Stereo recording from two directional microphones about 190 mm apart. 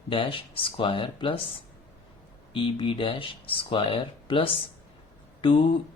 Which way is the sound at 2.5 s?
25° left (ahead or behind).